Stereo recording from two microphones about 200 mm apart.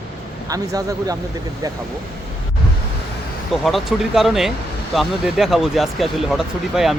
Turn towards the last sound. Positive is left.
turn(degrees=0)  # may be behind; listen again after turning